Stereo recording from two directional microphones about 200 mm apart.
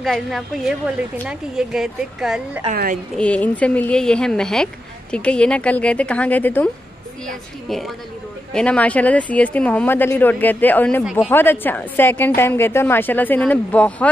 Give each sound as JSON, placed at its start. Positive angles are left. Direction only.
{"t": 0.0, "sound": "a woman's voice", "side_deg": 0}
{"t": 2.7, "sound": "a woman's voice", "side_deg": -45}
{"t": 3.2, "sound": "a woman's voice", "side_deg": 5}